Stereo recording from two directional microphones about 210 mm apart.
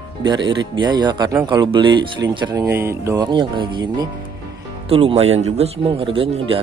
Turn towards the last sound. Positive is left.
turn(degrees=-25)  # may be behind; listen again after turning